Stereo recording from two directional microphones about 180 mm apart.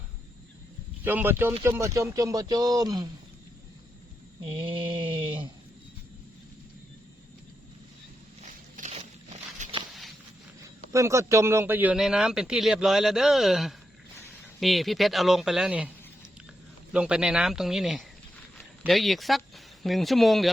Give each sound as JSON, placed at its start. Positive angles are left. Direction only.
{"t": 1.0, "sound": "speech", "side_deg": -10}
{"t": 4.4, "sound": "speech", "side_deg": -30}
{"t": 8.4, "sound": "a sound", "side_deg": -45}
{"t": 10.6, "sound": "a man's voice", "side_deg": -15}
{"t": 16.9, "sound": "a man's voice", "side_deg": -5}